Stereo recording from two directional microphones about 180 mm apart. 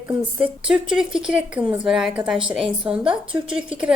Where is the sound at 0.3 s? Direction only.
5° right (ahead or behind).